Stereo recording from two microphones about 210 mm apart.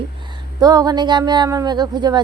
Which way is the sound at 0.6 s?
20° right (ahead or behind).